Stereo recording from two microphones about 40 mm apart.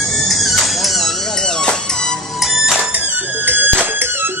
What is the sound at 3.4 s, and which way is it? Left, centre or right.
Music, right.